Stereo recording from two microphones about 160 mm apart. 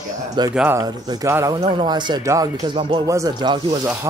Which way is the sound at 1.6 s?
30° right (ahead or behind).